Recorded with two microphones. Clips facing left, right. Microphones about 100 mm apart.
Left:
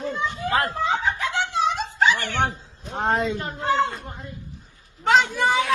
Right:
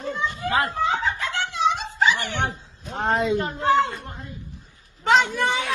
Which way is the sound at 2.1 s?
20° right (ahead or behind).